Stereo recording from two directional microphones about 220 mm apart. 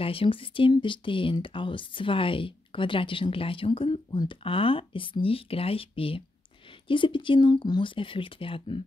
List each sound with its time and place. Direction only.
0.0 s speech: 25° left (ahead or behind)